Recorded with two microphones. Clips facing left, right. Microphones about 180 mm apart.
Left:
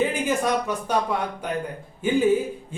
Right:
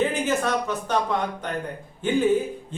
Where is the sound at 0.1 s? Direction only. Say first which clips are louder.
Left 1 dB; 10° left (ahead or behind).